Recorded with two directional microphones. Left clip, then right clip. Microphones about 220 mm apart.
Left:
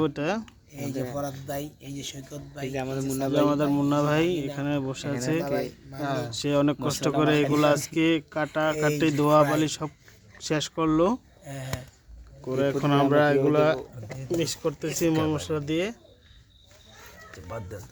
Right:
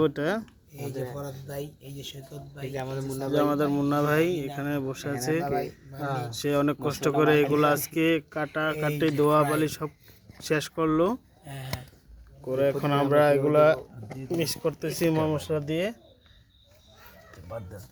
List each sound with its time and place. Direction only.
0.0 s speech: centre (ahead or behind)
0.7 s speech: 50° left (ahead or behind)
2.7 s speech: 15° left (ahead or behind)
3.3 s speech: centre (ahead or behind)
5.5 s speech: 35° left (ahead or behind)
6.3 s speech: 5° left (ahead or behind)
11.4 s speech: 35° left (ahead or behind)
12.5 s speech: 10° left (ahead or behind)